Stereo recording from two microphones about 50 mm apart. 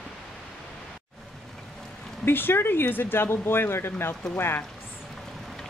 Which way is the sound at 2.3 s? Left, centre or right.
Left.